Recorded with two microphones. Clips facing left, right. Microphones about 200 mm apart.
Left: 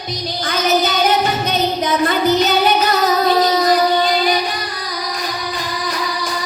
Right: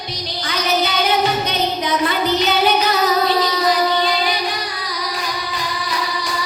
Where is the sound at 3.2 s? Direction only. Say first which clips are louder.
Left 3 dB; 45° left (ahead or behind).